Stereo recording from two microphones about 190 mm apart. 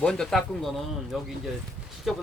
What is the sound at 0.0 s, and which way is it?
Speech, 5° left (ahead or behind).